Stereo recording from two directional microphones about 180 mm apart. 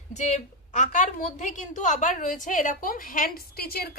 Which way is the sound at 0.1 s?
40° left (ahead or behind).